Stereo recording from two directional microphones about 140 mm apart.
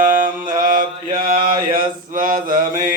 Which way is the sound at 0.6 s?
75° right (ahead or behind).